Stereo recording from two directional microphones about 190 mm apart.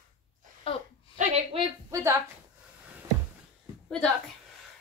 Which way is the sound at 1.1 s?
35° right (ahead or behind).